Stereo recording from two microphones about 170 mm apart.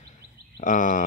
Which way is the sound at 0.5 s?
50° left (ahead or behind).